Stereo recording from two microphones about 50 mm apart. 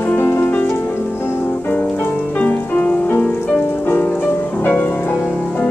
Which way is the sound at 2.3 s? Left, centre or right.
Left.